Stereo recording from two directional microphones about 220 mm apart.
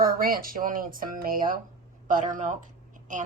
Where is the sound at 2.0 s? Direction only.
35° right (ahead or behind).